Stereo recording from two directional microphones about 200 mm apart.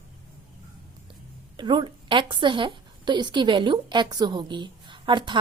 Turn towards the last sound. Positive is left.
turn(degrees=-25)  # may be behind; listen again after turning